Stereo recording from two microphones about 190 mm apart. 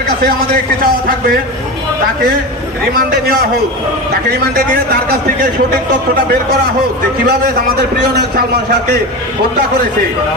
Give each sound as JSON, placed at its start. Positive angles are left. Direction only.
{"t": 0.2, "sound": "speech", "side_deg": -50}
{"t": 2.9, "sound": "speech", "side_deg": -50}
{"t": 7.3, "sound": "a man's voice", "side_deg": -55}